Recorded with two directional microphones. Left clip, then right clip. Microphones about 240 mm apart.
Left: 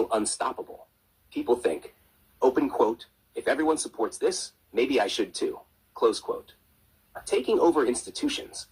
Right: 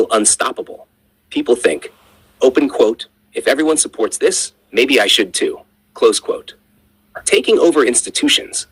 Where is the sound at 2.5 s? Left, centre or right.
Right.